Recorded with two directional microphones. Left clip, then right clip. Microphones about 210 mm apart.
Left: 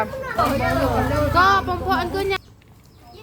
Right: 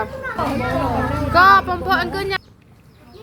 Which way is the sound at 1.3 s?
15° right (ahead or behind).